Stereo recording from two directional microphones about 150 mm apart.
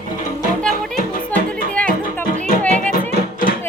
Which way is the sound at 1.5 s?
10° left (ahead or behind).